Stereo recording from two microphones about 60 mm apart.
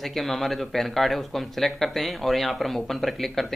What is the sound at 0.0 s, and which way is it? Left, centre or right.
Speech, centre.